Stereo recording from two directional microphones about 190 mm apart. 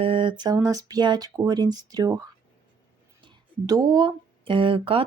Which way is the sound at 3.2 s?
25° right (ahead or behind).